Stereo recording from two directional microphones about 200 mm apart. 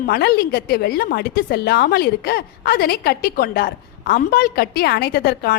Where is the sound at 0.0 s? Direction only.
50° left (ahead or behind).